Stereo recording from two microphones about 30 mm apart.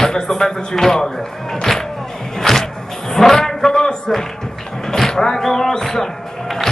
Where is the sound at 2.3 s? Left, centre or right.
Centre.